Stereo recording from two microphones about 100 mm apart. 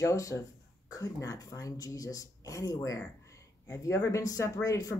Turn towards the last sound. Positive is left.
turn(degrees=35)  # may be behind; listen again after turning